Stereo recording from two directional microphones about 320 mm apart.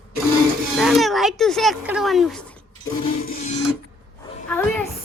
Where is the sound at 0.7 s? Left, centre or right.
Centre.